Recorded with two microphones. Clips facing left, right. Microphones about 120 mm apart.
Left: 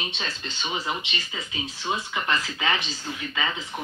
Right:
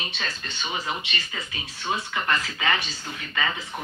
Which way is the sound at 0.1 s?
25° left (ahead or behind).